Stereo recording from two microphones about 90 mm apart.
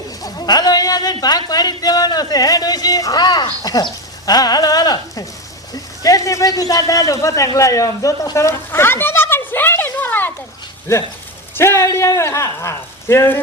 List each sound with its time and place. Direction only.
0.2 s a man's voice: 45° left (ahead or behind); by 10.3 s 20° left (ahead or behind)
10.9 s a man's voice: 35° left (ahead or behind)